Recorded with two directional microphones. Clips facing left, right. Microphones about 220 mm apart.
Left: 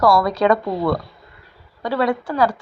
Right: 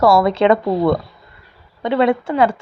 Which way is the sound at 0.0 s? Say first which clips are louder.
Right 3 dB; 25° right (ahead or behind).